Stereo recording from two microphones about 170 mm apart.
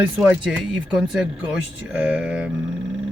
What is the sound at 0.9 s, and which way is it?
Speech, 5° right (ahead or behind).